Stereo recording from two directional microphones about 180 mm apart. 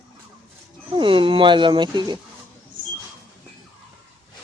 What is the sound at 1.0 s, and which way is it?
Speech, 30° right (ahead or behind).